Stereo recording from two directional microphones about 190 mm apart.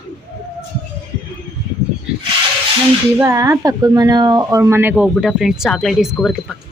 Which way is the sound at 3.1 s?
15° right (ahead or behind).